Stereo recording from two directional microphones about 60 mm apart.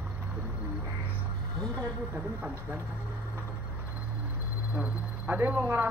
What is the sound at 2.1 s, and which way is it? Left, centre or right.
Speech, right.